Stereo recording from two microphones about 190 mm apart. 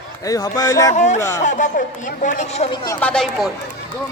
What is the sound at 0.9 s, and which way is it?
Speech, 40° left (ahead or behind).